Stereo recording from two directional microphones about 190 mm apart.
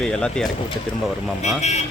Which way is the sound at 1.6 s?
35° left (ahead or behind).